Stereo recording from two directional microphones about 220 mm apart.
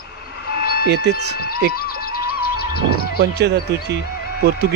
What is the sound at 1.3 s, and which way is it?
Speech, 45° left (ahead or behind).